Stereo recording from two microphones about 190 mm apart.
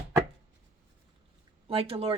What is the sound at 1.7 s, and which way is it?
Speech, 30° right (ahead or behind).